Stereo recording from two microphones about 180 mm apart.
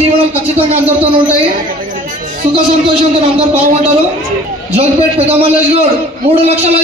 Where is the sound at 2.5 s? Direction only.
35° right (ahead or behind).